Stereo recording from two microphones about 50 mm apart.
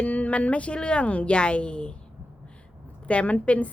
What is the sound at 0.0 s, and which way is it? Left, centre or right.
Speech, left.